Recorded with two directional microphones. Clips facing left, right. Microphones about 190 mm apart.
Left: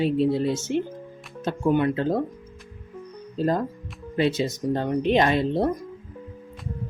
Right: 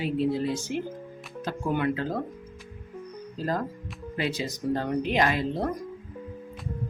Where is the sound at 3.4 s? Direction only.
25° left (ahead or behind).